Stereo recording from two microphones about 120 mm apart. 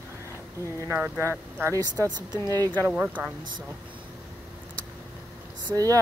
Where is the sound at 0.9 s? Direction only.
20° right (ahead or behind).